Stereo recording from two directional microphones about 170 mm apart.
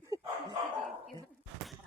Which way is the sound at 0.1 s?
20° right (ahead or behind).